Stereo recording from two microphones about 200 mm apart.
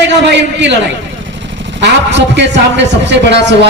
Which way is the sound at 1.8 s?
60° right (ahead or behind).